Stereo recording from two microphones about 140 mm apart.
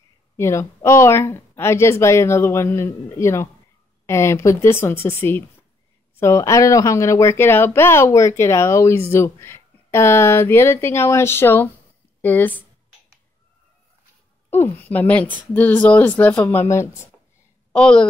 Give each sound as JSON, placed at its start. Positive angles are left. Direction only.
{"t": 0.4, "sound": "speech", "side_deg": 20}
{"t": 14.5, "sound": "speech", "side_deg": 15}
{"t": 17.7, "sound": "speech", "side_deg": 5}